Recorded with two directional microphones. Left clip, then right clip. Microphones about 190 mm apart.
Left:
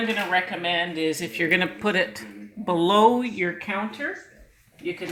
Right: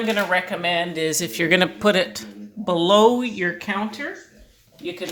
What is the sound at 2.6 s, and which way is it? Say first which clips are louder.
Speech: right 3 dB; 15° right (ahead or behind).